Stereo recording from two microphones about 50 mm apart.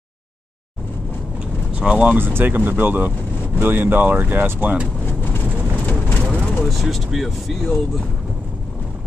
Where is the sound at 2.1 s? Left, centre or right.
Right.